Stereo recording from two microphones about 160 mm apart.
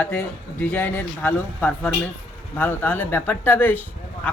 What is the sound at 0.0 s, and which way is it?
Speech, 10° left (ahead or behind).